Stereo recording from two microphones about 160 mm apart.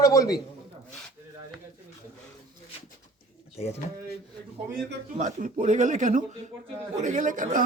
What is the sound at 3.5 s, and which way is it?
Speech, 40° left (ahead or behind).